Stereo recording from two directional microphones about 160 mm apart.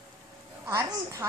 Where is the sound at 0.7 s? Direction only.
20° right (ahead or behind).